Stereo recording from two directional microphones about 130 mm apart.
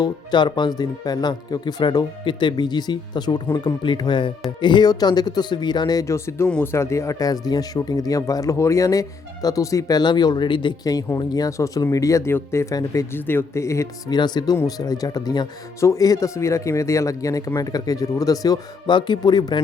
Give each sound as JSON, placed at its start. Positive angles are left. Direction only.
{"t": 0.0, "sound": "speech", "side_deg": 35}
{"t": 14.2, "sound": "speech", "side_deg": 35}